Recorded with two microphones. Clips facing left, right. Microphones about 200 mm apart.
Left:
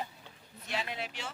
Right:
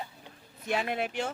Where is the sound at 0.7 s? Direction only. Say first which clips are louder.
Right 7 dB; 55° right (ahead or behind).